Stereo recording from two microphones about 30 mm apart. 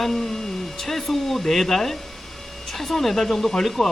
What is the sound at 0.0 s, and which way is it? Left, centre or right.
Speech, centre.